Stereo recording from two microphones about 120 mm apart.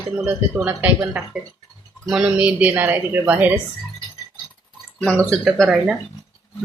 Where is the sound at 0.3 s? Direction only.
15° right (ahead or behind).